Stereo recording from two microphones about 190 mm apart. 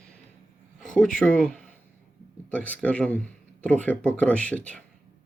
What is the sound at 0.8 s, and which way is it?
Speech, 5° left (ahead or behind).